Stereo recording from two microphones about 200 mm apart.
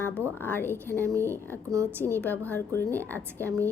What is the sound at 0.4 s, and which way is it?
Speech, 10° left (ahead or behind).